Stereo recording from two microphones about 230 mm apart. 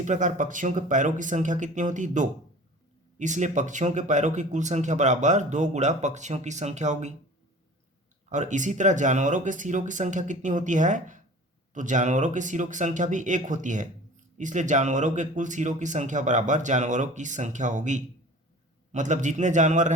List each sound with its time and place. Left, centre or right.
0.0 s speech: right
8.3 s speech: right